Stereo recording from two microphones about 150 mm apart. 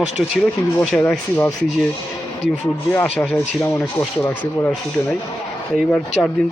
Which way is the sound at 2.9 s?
10° left (ahead or behind).